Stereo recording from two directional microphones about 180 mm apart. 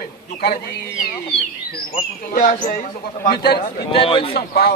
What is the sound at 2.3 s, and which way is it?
Speech, 50° left (ahead or behind).